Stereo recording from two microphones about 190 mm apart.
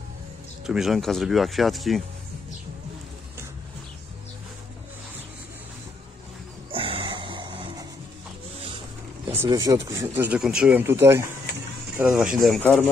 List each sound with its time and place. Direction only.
0.7 s speech: centre (ahead or behind)
6.7 s a sound: 30° right (ahead or behind)
9.3 s speech: 15° right (ahead or behind); by 12.8 s centre (ahead or behind)